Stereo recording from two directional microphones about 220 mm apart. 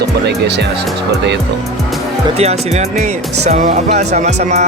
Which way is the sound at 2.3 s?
30° right (ahead or behind).